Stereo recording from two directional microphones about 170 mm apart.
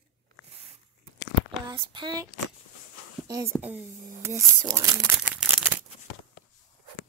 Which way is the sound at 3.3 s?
15° right (ahead or behind).